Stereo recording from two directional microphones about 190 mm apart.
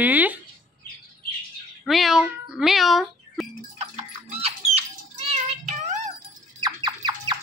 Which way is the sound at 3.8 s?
35° right (ahead or behind).